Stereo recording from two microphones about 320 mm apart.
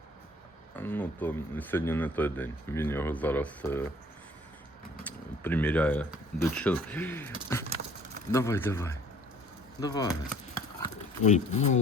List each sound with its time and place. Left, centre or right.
0.8 s speech: centre
5.0 s speech: centre; by 11.8 s left